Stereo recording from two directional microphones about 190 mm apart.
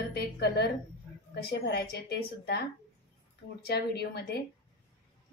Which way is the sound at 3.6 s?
60° left (ahead or behind).